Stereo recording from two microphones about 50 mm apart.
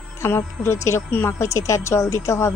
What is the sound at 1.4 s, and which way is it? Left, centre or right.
Speech, left.